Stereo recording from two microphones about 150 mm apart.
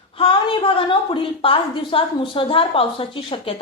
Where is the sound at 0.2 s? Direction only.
35° left (ahead or behind).